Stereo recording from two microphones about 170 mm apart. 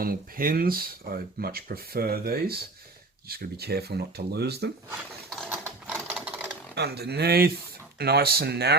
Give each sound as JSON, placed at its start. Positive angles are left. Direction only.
{"t": 0.0, "sound": "speech", "side_deg": -60}
{"t": 5.5, "sound": "sewing machine", "side_deg": -10}
{"t": 6.7, "sound": "speech", "side_deg": -75}